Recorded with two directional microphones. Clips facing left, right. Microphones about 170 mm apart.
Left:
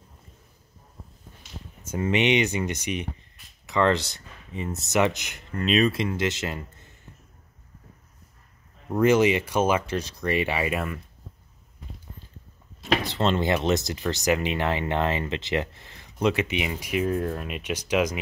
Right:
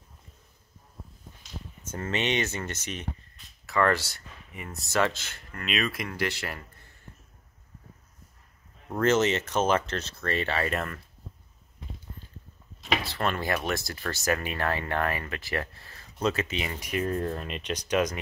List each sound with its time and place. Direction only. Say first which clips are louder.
1.8 s speech: left 7 dB; 10° left (ahead or behind)
5.6 s speech: left 9 dB; 30° left (ahead or behind)
8.8 s speech: left 4 dB; 10° left (ahead or behind)
13.0 s speech: left 6 dB; 20° left (ahead or behind)